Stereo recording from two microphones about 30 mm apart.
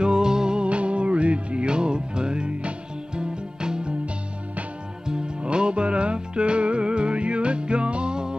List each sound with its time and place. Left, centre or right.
0.0 s music: right
0.6 s music: right
5.0 s music: right